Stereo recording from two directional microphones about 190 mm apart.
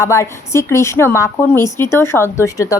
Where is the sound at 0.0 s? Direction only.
15° left (ahead or behind).